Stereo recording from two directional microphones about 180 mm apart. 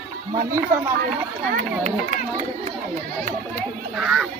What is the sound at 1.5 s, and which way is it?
Speech, 40° right (ahead or behind).